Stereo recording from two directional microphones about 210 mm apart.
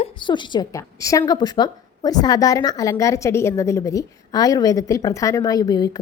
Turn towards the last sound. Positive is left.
turn(degrees=20)  # may be behind; listen again after turning